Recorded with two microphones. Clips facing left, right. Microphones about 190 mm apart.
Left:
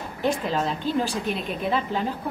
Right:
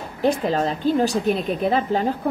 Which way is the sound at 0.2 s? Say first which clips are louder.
Right 5 dB; 40° right (ahead or behind).